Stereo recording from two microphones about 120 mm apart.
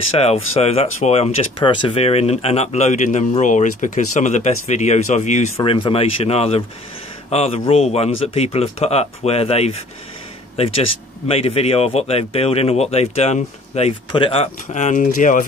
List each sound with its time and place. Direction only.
0.2 s speech: 60° left (ahead or behind)
1.6 s speech: 45° left (ahead or behind); by 5.5 s 75° left (ahead or behind)
5.7 s speech: 50° left (ahead or behind); by 13.9 s 65° left (ahead or behind)
14.1 s speech: 50° left (ahead or behind)
14.7 s speech: 90° left